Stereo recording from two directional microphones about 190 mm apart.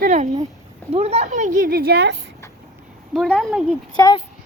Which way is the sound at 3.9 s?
20° left (ahead or behind).